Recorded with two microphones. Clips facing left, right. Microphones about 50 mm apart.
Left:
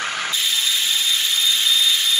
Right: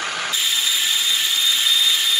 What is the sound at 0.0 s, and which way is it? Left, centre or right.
Wood, left.